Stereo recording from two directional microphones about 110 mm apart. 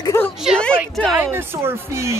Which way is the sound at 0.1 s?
25° left (ahead or behind).